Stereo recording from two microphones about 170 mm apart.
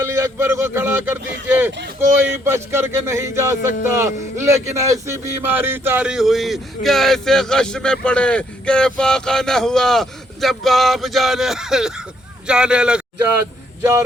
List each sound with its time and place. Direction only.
0.0 s speech: 15° right (ahead or behind)